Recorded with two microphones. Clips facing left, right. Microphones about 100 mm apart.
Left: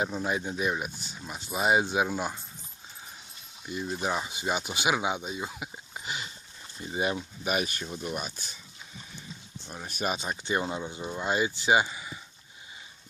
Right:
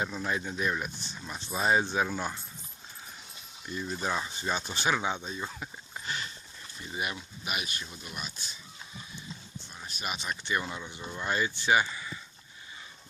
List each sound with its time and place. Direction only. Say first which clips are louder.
0.0 s speech: left 3 dB; 25° left (ahead or behind)
3.7 s speech: left 2 dB; 15° left (ahead or behind)
6.9 s speech: left 6 dB; 30° left (ahead or behind)
7.2 s speech: left 7 dB; 40° left (ahead or behind)
9.6 s speech: left 8 dB; 50° left (ahead or behind)
10.1 s speech: left 2 dB; 30° left (ahead or behind)